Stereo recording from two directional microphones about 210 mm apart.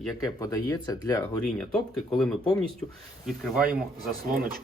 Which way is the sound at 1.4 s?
Centre (ahead or behind).